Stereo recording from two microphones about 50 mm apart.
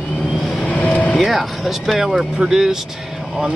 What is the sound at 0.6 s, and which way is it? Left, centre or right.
Vehicle, left.